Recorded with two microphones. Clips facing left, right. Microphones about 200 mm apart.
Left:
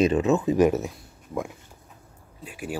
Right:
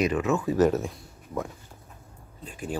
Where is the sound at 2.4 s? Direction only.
10° left (ahead or behind).